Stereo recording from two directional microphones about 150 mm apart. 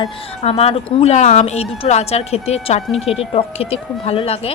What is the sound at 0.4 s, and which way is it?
Speech, 40° left (ahead or behind).